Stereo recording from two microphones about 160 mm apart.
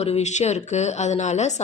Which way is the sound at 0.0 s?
45° left (ahead or behind).